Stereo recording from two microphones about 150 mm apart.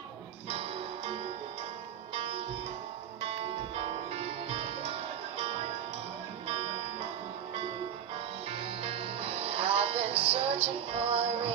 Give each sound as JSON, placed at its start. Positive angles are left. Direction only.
{"t": 0.5, "sound": "music", "side_deg": -45}
{"t": 2.1, "sound": "sitar", "side_deg": -40}
{"t": 3.2, "sound": "music", "side_deg": -40}
{"t": 8.5, "sound": "music", "side_deg": -40}